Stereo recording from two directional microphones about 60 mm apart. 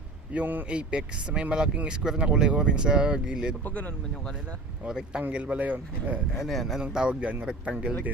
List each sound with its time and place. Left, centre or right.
0.3 s a man's voice: right
0.7 s speech: centre
3.6 s speech: left
4.9 s speech: centre
6.3 s speech: centre
6.9 s speech: centre